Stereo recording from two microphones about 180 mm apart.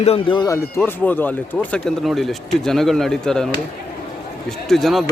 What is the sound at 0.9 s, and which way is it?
Speech, 10° left (ahead or behind).